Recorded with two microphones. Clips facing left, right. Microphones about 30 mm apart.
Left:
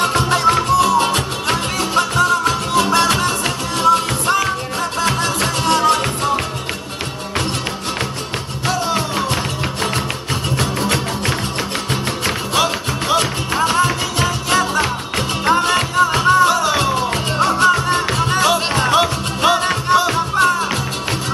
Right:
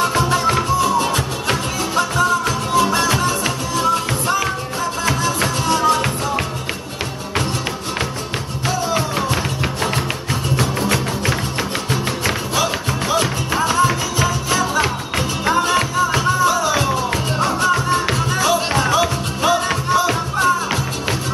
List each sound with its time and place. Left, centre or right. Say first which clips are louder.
0.0 s music: left 1 dB; left
0.7 s music: left 3 dB; left
5.0 s music: left 1 dB; left
10.6 s music: even; left
12.5 s music: left 2 dB; left
15.1 s music: left 2 dB; left
15.6 s music: left 2 dB; left
17.1 s music: left 2 dB; left
17.6 s music: left 2 dB; left